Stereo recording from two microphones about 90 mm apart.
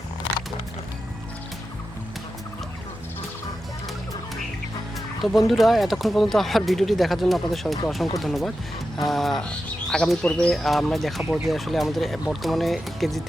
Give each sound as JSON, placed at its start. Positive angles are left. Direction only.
{"t": 5.2, "sound": "speech", "side_deg": 0}